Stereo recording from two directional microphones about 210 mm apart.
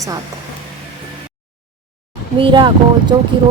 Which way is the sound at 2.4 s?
25° right (ahead or behind).